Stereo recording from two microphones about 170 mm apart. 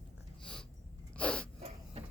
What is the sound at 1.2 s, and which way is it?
Sneeze, 5° left (ahead or behind).